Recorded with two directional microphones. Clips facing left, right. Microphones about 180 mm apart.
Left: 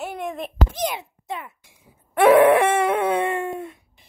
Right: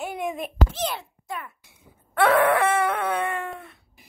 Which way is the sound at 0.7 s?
15° left (ahead or behind).